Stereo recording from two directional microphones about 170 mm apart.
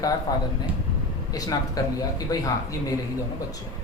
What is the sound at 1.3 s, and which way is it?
Speech, 20° left (ahead or behind).